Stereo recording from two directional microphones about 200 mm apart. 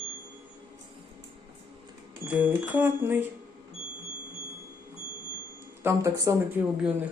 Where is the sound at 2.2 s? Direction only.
5° right (ahead or behind).